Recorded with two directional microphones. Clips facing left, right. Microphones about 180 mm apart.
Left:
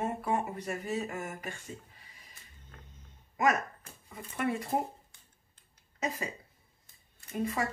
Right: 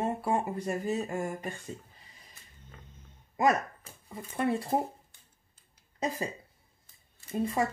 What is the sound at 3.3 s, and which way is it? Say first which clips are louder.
Speech: right 2 dB; 30° right (ahead or behind).